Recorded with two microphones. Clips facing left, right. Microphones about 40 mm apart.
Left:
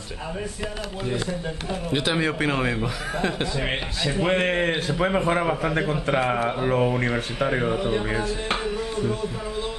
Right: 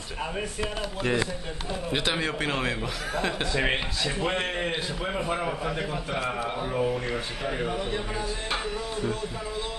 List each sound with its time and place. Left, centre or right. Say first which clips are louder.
1.9 s speech: left 4 dB; centre
4.2 s a man's voice: left 8 dB; left
7.6 s speech: left 6 dB; centre